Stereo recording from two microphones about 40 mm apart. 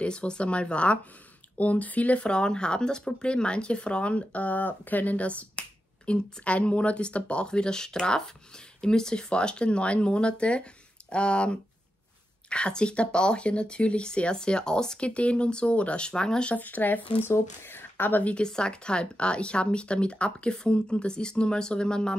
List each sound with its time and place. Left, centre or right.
0.0 s speech: left
2.2 s speech: left
15.0 s speech: left
16.5 s speech: left
17.3 s speech: left
18.2 s speech: left